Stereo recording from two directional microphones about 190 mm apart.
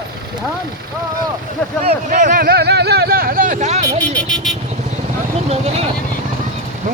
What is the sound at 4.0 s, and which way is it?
Speech, 5° left (ahead or behind).